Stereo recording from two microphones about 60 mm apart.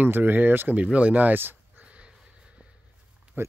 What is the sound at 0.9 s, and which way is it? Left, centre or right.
Speech, right.